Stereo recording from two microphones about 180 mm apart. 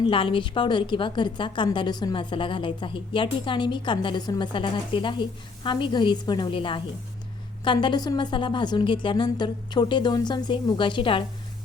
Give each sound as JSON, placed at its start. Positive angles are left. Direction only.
{"t": 0.0, "sound": "a woman's voice", "side_deg": 30}